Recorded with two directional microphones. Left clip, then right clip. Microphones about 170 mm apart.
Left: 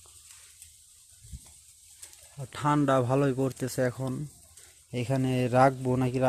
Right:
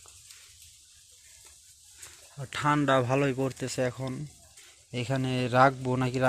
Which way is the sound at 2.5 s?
20° left (ahead or behind).